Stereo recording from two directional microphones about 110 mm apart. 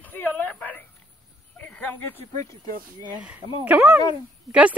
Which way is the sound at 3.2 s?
10° right (ahead or behind).